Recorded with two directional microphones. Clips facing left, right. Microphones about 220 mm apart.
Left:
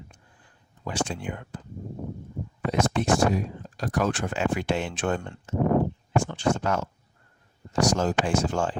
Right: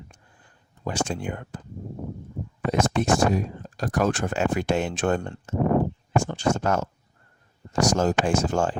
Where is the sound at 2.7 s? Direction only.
45° right (ahead or behind).